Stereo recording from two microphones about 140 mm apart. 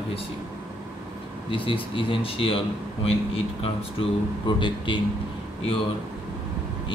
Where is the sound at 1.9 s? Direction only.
40° left (ahead or behind).